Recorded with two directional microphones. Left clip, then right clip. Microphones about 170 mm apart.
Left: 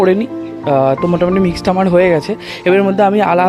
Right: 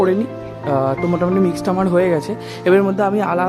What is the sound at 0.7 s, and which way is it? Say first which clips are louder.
Speech: left 6 dB; 15° left (ahead or behind).